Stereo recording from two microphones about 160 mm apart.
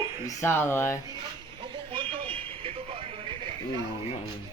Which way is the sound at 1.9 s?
30° right (ahead or behind).